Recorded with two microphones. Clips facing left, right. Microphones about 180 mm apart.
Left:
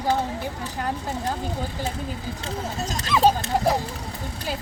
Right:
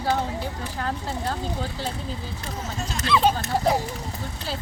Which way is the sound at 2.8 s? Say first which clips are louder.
Left 1 dB; 40° left (ahead or behind).